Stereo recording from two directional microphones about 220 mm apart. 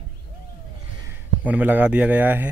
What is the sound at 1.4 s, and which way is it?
Speech, 5° right (ahead or behind).